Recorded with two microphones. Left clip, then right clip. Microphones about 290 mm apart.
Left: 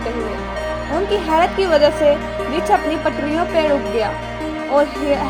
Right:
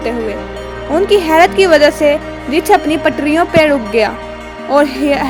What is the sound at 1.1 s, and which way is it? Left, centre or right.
A woman's voice, right.